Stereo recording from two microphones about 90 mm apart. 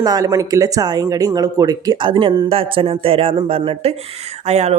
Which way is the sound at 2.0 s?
70° right (ahead or behind).